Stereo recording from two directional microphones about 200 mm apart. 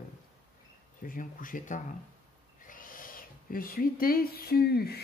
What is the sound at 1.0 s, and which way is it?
Speech, 45° left (ahead or behind).